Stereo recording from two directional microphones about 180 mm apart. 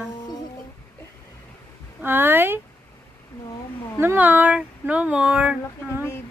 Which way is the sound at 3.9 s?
10° right (ahead or behind).